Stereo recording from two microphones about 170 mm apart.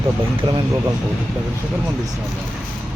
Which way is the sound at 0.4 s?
25° right (ahead or behind).